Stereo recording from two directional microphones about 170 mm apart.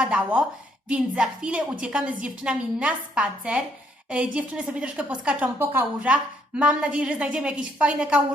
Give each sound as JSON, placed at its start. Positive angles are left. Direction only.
{"t": 0.0, "sound": "a woman's voice", "side_deg": -5}